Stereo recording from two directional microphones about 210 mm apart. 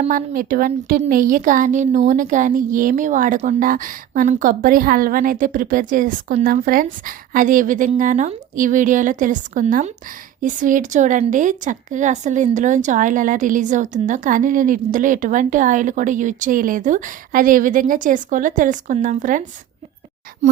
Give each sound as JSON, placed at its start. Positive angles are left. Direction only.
{"t": 0.0, "sound": "a woman's voice", "side_deg": -40}